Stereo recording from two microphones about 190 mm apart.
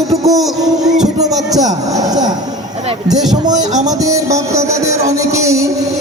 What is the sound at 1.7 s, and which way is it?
Music, 20° right (ahead or behind).